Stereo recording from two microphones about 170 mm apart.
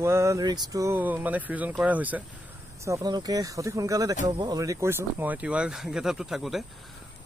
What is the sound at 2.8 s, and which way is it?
Speech, 20° right (ahead or behind).